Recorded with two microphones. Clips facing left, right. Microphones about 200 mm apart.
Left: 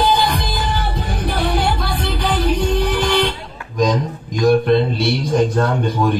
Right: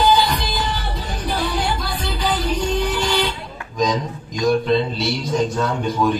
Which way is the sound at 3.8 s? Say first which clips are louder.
Left 3 dB; 55° left (ahead or behind).